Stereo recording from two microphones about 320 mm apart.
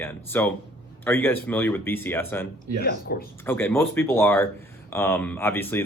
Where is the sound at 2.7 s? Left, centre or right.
Left.